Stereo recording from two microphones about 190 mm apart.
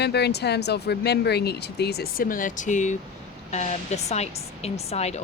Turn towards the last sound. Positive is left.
turn(degrees=35)  # may be behind; listen again after turning